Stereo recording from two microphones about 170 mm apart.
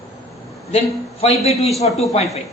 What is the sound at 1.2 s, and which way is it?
Speech, 35° left (ahead or behind).